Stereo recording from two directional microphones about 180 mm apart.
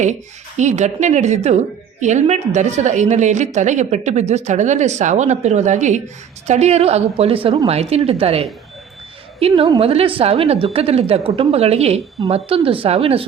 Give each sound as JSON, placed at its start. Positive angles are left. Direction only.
{"t": 0.0, "sound": "speech", "side_deg": -40}